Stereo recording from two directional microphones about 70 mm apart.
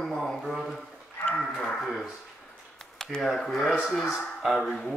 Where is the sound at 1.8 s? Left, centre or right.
Centre.